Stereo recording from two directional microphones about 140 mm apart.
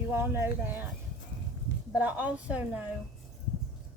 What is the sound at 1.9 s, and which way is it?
Speech, 10° right (ahead or behind).